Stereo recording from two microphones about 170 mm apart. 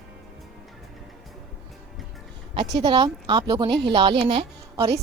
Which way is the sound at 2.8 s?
30° right (ahead or behind).